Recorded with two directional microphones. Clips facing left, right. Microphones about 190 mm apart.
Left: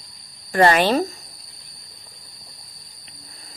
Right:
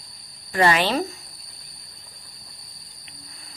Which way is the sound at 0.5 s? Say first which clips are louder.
Left 4 dB; 45° left (ahead or behind).